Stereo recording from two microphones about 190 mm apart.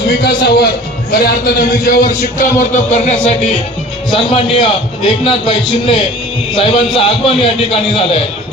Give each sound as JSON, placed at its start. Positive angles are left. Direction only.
{"t": 0.2, "sound": "a man's voice", "side_deg": 55}